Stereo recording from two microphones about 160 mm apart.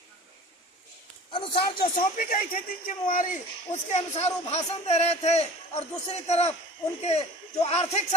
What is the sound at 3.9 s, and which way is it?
Speech, 40° left (ahead or behind).